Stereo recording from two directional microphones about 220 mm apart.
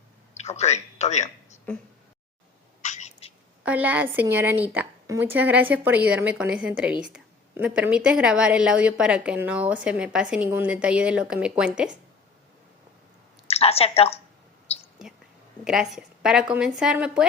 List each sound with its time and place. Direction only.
0.3 s speech: 30° left (ahead or behind)
2.8 s cat: 35° left (ahead or behind)
3.6 s a woman's voice: 5° right (ahead or behind)
13.5 s a woman's voice: 25° left (ahead or behind)
15.6 s a woman's voice: centre (ahead or behind)